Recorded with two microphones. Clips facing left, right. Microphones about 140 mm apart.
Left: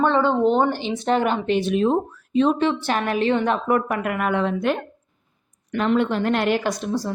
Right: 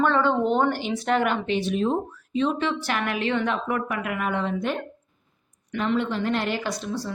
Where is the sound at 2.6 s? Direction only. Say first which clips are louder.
Left 5 dB; 30° left (ahead or behind); by 4.7 s 65° left (ahead or behind).